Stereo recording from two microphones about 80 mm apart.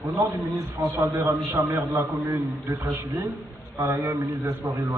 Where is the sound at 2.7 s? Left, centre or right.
Right.